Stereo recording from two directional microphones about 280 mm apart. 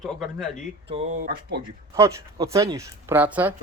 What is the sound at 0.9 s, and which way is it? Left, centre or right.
Speech, right.